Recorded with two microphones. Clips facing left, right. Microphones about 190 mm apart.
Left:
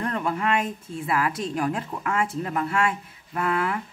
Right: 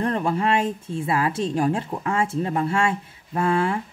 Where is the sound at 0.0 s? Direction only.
30° right (ahead or behind).